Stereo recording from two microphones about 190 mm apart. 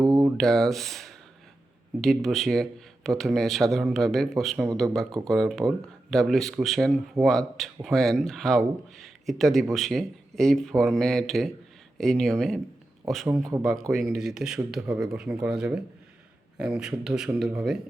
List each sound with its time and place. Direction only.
0.0 s a sound: 20° right (ahead or behind)
0.3 s speech: centre (ahead or behind)
13.6 s speech: centre (ahead or behind)